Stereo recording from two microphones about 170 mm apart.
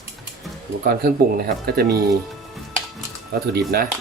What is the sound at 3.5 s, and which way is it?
Speech, 65° right (ahead or behind).